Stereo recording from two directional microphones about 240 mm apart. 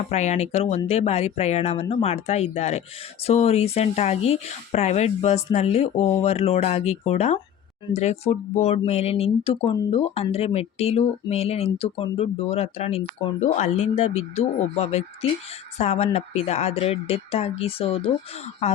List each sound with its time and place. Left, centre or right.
0.1 s speech: left